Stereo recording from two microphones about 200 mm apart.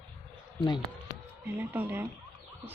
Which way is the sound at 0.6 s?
25° left (ahead or behind).